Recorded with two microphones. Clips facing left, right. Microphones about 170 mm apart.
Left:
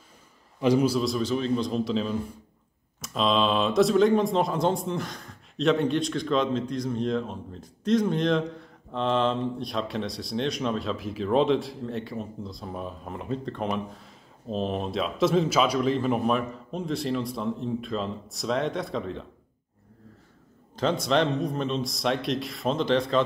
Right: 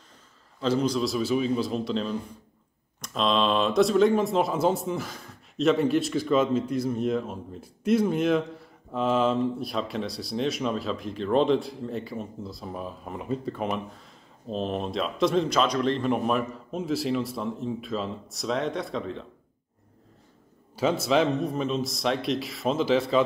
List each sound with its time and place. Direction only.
0.6 s speech: 10° left (ahead or behind)
20.7 s speech: 5° right (ahead or behind)